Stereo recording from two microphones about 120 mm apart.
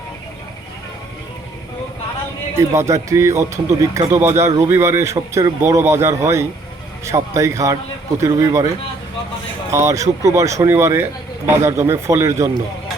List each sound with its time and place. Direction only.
2.6 s speech: 25° right (ahead or behind)
9.7 s speech: 25° right (ahead or behind)